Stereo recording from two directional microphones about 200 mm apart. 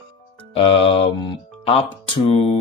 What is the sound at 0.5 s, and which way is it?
Speech, 30° left (ahead or behind).